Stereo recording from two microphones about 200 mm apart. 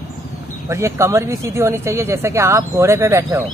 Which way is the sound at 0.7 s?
15° right (ahead or behind).